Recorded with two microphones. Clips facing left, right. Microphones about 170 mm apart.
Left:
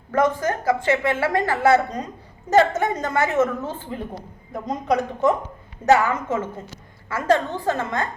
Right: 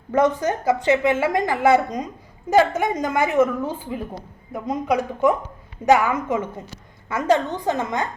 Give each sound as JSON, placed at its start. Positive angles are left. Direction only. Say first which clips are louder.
{"t": 0.1, "sound": "a woman's voice", "louder": "right 1 dB", "side_deg": -20}